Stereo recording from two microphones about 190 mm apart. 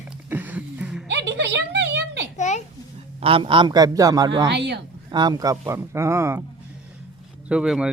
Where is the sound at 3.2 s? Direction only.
30° right (ahead or behind).